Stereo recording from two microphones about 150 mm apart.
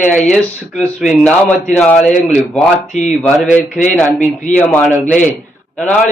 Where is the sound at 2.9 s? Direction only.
50° left (ahead or behind).